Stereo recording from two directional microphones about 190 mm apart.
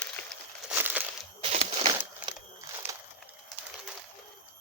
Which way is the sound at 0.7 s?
10° right (ahead or behind).